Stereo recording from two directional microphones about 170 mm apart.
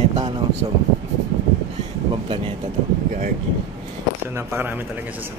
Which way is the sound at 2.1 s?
30° right (ahead or behind).